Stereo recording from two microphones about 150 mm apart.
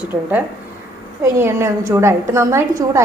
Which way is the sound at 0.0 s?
10° right (ahead or behind).